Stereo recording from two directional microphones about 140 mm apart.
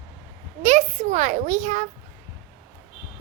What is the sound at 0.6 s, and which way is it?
A child's voice, 55° right (ahead or behind).